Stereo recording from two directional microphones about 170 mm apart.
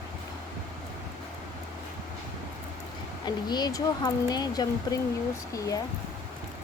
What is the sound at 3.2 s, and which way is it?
Speech, 25° left (ahead or behind).